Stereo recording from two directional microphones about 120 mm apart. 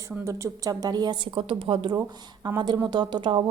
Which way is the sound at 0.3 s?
25° right (ahead or behind).